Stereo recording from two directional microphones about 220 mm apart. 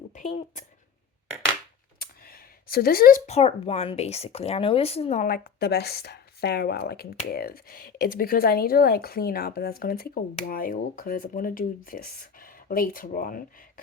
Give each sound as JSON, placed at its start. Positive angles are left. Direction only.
{"t": 0.1, "sound": "speech", "side_deg": 35}
{"t": 2.0, "sound": "speech", "side_deg": 40}